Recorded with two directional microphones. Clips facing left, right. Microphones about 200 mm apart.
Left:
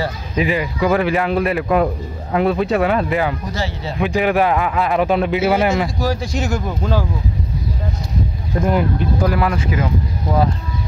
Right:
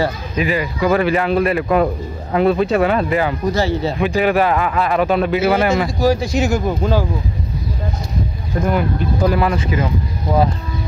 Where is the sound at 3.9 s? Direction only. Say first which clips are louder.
Left 1 dB; 15° left (ahead or behind).